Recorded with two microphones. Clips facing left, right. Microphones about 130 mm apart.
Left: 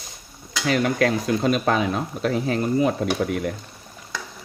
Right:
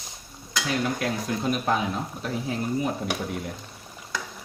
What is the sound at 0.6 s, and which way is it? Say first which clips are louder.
Speech: left 7 dB; 85° left.